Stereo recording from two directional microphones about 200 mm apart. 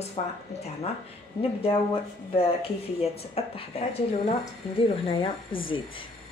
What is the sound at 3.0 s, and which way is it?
Speech, 30° left (ahead or behind).